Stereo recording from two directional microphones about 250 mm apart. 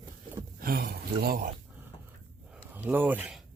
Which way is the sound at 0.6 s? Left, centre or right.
Right.